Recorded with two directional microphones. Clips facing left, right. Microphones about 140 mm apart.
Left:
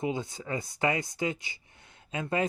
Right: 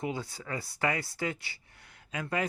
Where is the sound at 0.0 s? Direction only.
20° left (ahead or behind).